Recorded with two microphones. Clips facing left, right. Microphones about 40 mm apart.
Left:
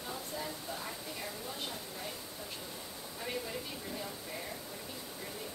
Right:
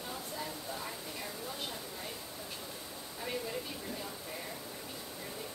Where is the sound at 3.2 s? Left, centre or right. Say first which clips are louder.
Right 1 dB; centre.